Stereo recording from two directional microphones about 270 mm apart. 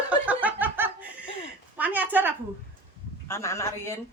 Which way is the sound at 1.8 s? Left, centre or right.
Centre.